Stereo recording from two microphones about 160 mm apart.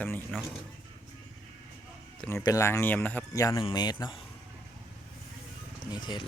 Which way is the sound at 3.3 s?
20° left (ahead or behind).